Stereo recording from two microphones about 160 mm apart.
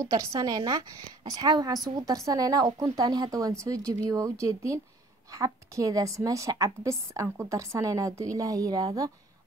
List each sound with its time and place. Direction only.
0.4 s a woman's voice: 25° right (ahead or behind)